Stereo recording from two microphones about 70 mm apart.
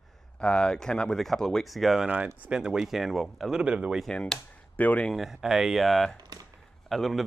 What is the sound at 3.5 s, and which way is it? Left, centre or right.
Speech, centre.